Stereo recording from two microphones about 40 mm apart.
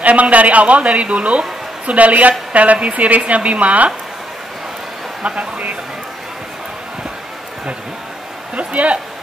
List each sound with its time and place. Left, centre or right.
0.0 s a woman's voice: right
5.2 s a woman's voice: right
8.5 s a woman's voice: right